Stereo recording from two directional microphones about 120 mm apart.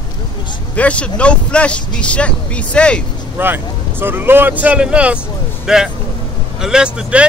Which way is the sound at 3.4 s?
15° right (ahead or behind).